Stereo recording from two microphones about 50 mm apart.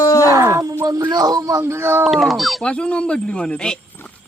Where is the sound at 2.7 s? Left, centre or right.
Left.